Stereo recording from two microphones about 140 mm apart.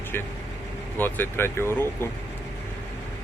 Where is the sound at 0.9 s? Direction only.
15° left (ahead or behind).